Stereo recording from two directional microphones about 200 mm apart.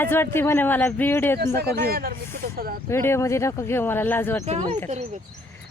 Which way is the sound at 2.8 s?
10° left (ahead or behind).